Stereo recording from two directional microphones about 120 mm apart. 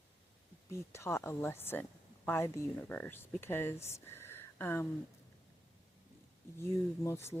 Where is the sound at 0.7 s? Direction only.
20° left (ahead or behind).